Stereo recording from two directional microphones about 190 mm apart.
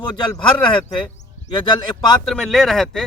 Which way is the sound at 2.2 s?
5° left (ahead or behind).